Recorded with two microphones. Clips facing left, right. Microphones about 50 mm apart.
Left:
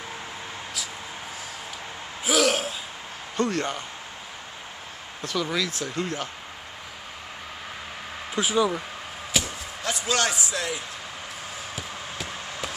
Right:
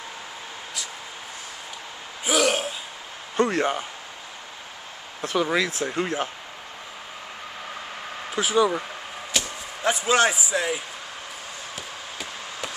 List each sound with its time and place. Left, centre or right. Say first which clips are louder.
2.2 s gasp: even; centre
3.4 s speech: right 3 dB; centre
5.2 s speech: right 4 dB; right
8.3 s speech: right 2 dB; centre
9.3 s chop: left 1 dB; centre
9.8 s a man's voice: right 5 dB; centre
11.7 s a sound: left 1 dB; centre